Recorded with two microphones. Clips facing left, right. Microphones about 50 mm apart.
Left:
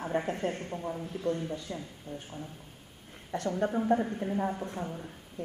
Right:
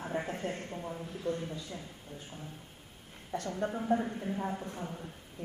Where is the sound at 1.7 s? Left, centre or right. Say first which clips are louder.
Left 5 dB; left.